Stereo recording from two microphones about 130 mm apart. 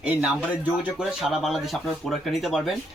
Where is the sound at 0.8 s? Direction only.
5° right (ahead or behind).